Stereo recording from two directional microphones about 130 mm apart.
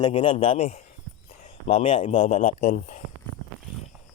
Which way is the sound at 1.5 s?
60° left (ahead or behind).